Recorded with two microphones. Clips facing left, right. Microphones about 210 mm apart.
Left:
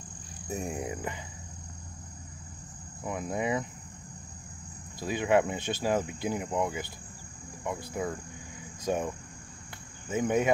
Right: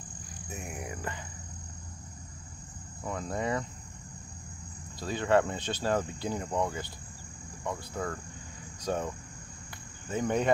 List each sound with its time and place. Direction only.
0.5 s speech: 30° left (ahead or behind)
3.0 s speech: 15° left (ahead or behind)
5.0 s speech: 10° left (ahead or behind)
8.8 s cricket: 10° left (ahead or behind)
10.0 s speech: 5° left (ahead or behind)